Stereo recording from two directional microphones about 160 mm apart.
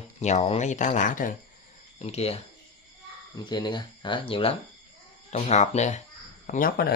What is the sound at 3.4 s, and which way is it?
Speech, 25° left (ahead or behind).